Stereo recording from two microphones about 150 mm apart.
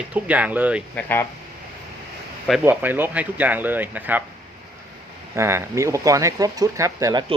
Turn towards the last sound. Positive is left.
turn(degrees=-25)  # may be behind; listen again after turning